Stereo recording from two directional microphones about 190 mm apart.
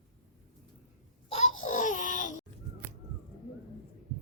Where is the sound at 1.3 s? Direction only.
40° left (ahead or behind).